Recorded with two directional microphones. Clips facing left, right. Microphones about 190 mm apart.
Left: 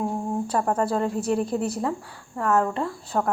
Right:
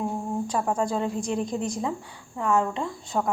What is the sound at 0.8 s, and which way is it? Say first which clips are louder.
Speech: left 2 dB; centre (ahead or behind).